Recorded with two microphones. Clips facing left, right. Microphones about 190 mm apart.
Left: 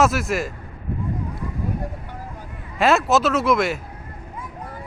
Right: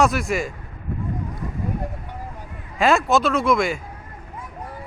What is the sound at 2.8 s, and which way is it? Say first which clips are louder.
Speech: even; centre (ahead or behind).